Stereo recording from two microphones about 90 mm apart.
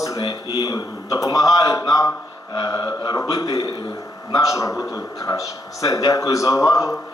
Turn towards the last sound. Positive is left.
turn(degrees=35)  # may be behind; listen again after turning